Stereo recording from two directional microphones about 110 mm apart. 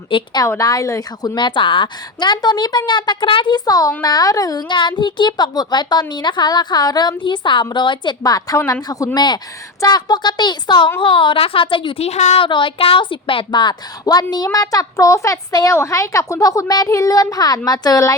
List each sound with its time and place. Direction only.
0.1 s a woman's voice: 55° left (ahead or behind)
0.4 s a woman's voice: 30° left (ahead or behind)
1.4 s a woman's voice: 45° left (ahead or behind)
12.0 s a woman's voice: 80° left
12.4 s a woman's voice: 50° left (ahead or behind); by 18.2 s 30° left (ahead or behind)